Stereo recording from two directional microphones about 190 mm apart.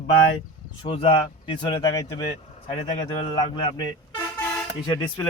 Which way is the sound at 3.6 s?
25° left (ahead or behind).